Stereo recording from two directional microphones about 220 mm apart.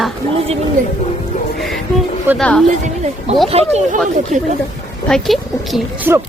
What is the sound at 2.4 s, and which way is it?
Speech, 5° left (ahead or behind).